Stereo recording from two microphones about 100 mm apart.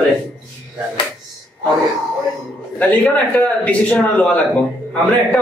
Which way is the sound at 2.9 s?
10° left (ahead or behind).